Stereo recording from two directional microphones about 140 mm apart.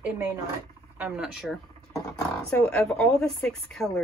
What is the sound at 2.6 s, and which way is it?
Speech, 5° left (ahead or behind).